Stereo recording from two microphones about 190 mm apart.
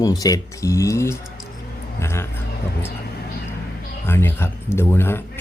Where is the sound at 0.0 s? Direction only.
20° left (ahead or behind).